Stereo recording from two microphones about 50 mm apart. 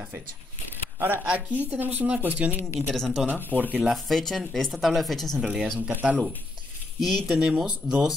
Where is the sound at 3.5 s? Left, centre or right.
Left.